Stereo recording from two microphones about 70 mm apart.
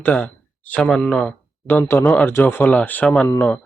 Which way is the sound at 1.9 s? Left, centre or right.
Left.